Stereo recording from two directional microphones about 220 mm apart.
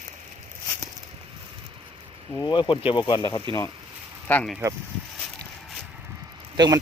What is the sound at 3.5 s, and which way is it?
Speech, 20° right (ahead or behind).